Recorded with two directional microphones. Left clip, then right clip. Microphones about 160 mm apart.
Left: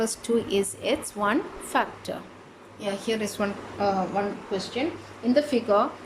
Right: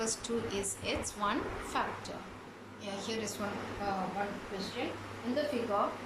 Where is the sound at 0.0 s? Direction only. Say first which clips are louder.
Left 10 dB; 55° left (ahead or behind).